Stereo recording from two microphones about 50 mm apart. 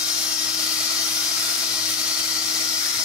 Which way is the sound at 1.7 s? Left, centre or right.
Right.